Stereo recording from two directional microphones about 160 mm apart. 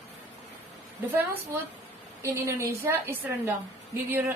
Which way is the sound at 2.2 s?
20° right (ahead or behind).